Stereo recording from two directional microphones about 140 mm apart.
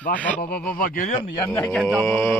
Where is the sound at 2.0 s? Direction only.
20° left (ahead or behind).